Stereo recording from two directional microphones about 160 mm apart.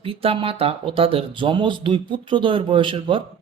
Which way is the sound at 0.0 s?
35° right (ahead or behind).